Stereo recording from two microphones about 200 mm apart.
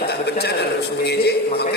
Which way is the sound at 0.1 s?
55° left (ahead or behind).